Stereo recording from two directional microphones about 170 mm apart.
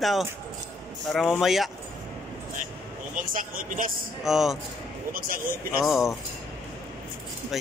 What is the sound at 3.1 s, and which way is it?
Speech, 55° right (ahead or behind).